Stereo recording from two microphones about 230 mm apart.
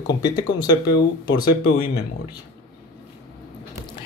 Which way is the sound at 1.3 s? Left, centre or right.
Left.